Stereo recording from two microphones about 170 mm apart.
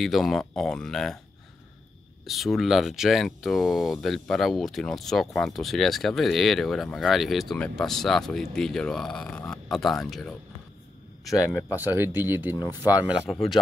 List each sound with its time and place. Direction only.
0.0 s speech: centre (ahead or behind)
2.2 s speech: centre (ahead or behind)
11.2 s speech: 20° left (ahead or behind)
11.7 s speech: 10° right (ahead or behind)